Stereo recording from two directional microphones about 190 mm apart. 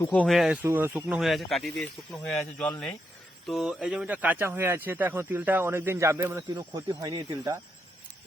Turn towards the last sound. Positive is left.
turn(degrees=-20)  # may be behind; listen again after turning